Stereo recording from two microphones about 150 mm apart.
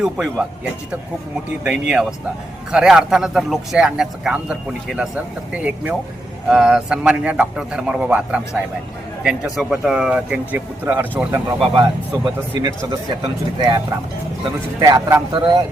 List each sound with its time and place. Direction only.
0.0 s a man's voice: 5° right (ahead or behind)
1.5 s a man's voice: 5° right (ahead or behind)
5.5 s a man's voice: 5° right (ahead or behind); by 15.6 s 25° right (ahead or behind)